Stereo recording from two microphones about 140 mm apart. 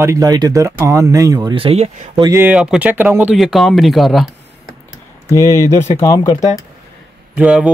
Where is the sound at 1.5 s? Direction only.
45° right (ahead or behind).